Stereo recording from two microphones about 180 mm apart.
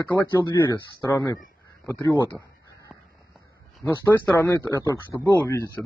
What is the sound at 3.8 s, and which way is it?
Speech, 5° left (ahead or behind).